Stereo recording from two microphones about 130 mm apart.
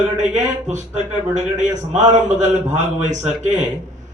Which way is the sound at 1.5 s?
65° right (ahead or behind).